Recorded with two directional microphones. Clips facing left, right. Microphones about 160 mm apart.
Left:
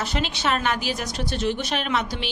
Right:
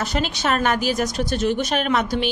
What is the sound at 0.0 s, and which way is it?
A woman's voice, 45° right (ahead or behind).